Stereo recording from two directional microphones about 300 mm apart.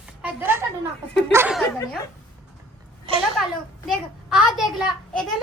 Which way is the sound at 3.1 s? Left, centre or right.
Centre.